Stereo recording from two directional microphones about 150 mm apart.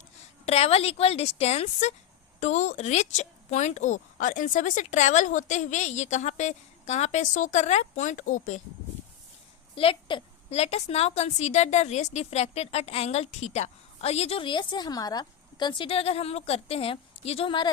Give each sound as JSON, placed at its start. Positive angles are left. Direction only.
{"t": 0.4, "sound": "a woman's voice", "side_deg": 45}
{"t": 9.7, "sound": "a woman's voice", "side_deg": 35}
{"t": 10.5, "sound": "a woman's voice", "side_deg": 45}